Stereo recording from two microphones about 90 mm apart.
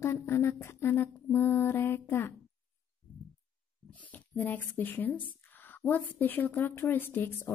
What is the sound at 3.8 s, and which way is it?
Speech, 15° left (ahead or behind).